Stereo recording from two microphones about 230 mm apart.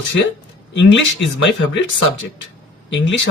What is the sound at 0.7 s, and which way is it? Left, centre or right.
Speech, left.